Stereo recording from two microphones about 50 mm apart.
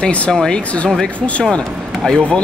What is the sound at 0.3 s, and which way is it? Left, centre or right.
Speech, centre.